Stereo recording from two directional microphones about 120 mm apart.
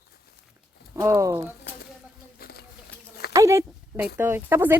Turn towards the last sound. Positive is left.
turn(degrees=-20)  # may be behind; listen again after turning